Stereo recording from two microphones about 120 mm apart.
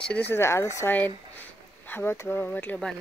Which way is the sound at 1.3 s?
15° left (ahead or behind).